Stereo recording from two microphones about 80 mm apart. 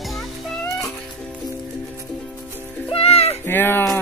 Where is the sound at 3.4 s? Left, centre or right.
Left.